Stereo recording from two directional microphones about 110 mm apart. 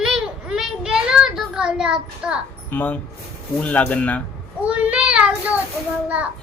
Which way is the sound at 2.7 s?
15° left (ahead or behind).